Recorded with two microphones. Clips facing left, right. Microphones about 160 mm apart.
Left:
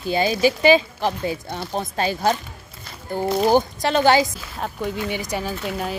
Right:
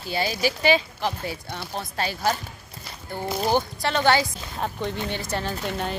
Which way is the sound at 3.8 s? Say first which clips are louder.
Left 4 dB; 15° left (ahead or behind).